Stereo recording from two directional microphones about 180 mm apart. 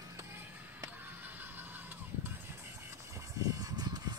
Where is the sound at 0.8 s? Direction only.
10° right (ahead or behind).